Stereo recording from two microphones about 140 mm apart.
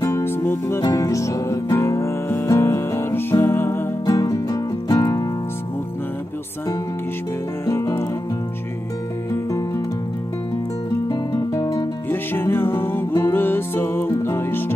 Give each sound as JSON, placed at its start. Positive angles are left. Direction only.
{"t": 0.0, "sound": "music", "side_deg": 15}
{"t": 4.0, "sound": "music", "side_deg": 25}
{"t": 7.6, "sound": "music", "side_deg": 20}
{"t": 11.1, "sound": "music", "side_deg": 25}